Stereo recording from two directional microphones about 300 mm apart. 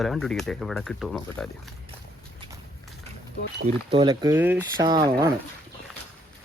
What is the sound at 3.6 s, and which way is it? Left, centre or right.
Speech, centre.